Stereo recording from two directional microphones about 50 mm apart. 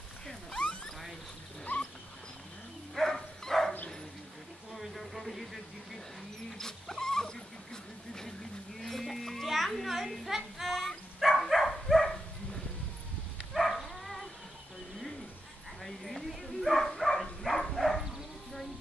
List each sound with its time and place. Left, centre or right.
1.6 s dog: centre
2.9 s dog: centre
4.7 s a sound: centre
6.6 s dog: centre
8.7 s children playing: centre
9.8 s a sound: centre
11.1 s dog: centre
13.5 s dog: centre
15.8 s dog: centre